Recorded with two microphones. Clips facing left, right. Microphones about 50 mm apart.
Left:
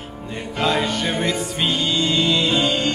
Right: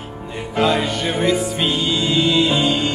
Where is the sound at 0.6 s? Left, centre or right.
Centre.